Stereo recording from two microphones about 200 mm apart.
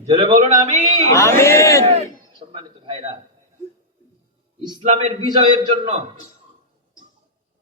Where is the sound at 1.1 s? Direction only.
15° left (ahead or behind).